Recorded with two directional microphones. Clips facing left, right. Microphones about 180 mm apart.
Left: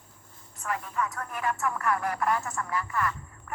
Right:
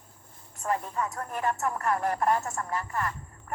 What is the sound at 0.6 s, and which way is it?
Speech, 35° right (ahead or behind).